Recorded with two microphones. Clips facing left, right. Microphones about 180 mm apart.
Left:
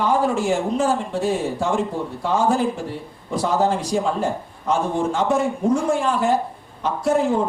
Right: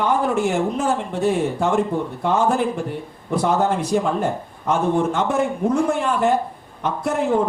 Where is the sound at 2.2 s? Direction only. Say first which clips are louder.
Even; 60° right (ahead or behind).